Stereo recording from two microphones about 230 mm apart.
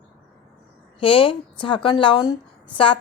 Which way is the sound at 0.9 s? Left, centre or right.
Left.